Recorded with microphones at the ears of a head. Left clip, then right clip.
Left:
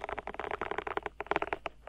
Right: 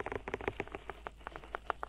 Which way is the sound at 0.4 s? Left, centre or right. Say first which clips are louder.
Left 5 dB; left.